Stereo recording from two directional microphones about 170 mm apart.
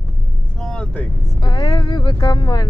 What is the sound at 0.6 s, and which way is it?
Vehicle, 5° left (ahead or behind).